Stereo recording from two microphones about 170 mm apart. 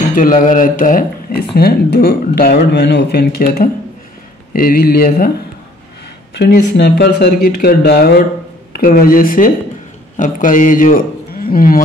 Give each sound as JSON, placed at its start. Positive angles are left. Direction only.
{"t": 0.1, "sound": "speech", "side_deg": 55}
{"t": 6.3, "sound": "a man's voice", "side_deg": 75}